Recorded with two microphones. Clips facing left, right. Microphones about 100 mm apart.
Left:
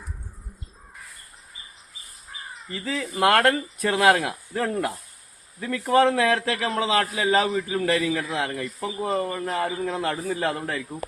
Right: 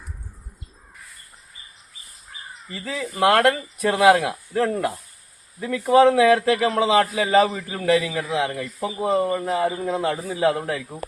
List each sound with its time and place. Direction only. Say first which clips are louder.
2.7 s speech: right 1 dB; 5° right (ahead or behind)
5.5 s speech: right 4 dB; 10° right (ahead or behind)
7.3 s speech: right 3 dB; 5° right (ahead or behind)